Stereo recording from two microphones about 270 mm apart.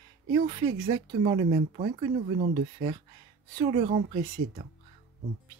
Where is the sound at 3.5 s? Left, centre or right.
Right.